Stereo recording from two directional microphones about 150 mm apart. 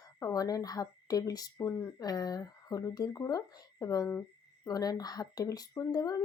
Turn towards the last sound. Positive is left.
turn(degrees=25)  # may be behind; listen again after turning